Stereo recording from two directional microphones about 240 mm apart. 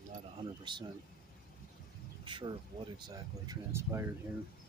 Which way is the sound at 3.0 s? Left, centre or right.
Centre.